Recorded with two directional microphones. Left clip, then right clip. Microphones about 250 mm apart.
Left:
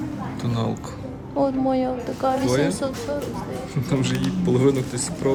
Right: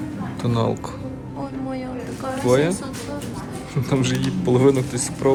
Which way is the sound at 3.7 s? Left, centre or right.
Centre.